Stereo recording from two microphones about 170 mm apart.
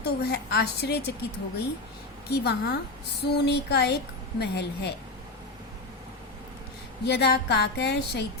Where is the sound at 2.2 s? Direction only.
75° left (ahead or behind).